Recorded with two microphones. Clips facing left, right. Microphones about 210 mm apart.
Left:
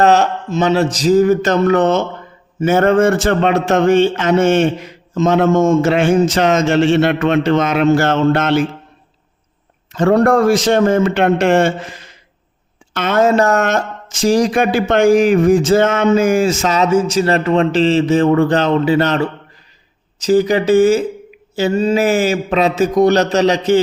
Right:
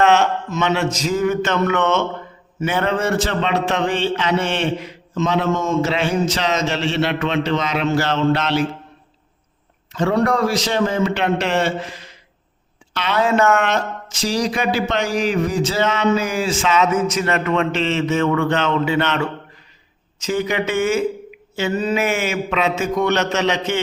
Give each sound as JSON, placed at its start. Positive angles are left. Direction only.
{"t": 0.0, "sound": "a man's voice", "side_deg": 35}
{"t": 9.9, "sound": "a man's voice", "side_deg": 45}